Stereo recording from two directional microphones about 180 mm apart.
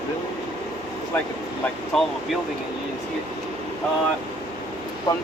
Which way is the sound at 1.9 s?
Centre (ahead or behind).